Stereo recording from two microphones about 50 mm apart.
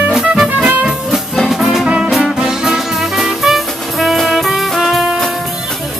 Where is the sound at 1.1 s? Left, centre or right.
Centre.